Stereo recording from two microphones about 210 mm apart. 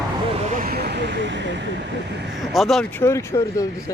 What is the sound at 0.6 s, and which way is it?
Speech, 45° right (ahead or behind).